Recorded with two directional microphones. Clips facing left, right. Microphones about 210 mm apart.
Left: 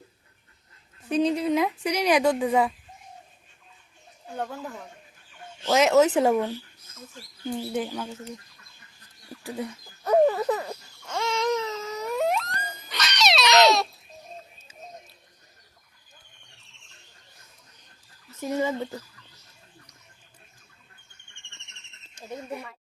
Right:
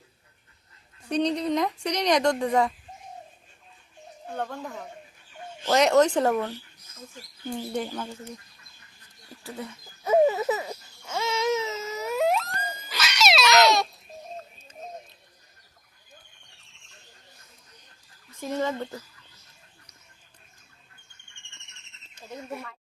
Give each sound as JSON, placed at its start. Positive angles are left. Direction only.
{"t": 1.0, "sound": "a woman's voice", "side_deg": 5}
{"t": 4.4, "sound": "speech", "side_deg": 5}
{"t": 5.7, "sound": "speech", "side_deg": 5}
{"t": 7.6, "sound": "a woman's voice", "side_deg": 5}
{"t": 9.4, "sound": "speech", "side_deg": 15}
{"t": 10.0, "sound": "baby cry", "side_deg": -5}
{"t": 12.9, "sound": "cat", "side_deg": 0}
{"t": 13.4, "sound": "a sound", "side_deg": 20}
{"t": 18.3, "sound": "a woman's voice", "side_deg": 5}
{"t": 22.4, "sound": "a woman's voice", "side_deg": 5}